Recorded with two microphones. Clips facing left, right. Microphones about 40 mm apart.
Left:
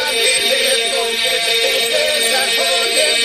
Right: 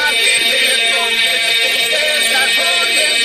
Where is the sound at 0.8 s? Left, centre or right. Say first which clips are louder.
Right 3 dB; right.